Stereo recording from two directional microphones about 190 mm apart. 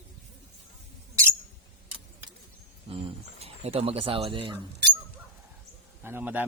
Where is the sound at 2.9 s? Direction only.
30° right (ahead or behind).